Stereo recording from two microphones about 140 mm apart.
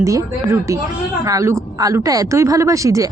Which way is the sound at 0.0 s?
20° right (ahead or behind).